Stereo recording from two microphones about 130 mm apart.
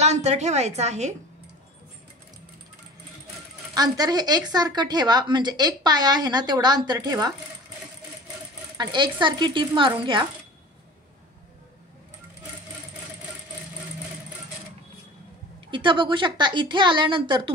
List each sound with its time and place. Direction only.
0.0 s a woman's voice: 60° right (ahead or behind)
3.7 s a woman's voice: 30° right (ahead or behind)
8.7 s a woman's voice: 35° right (ahead or behind)
15.7 s a woman's voice: 40° right (ahead or behind)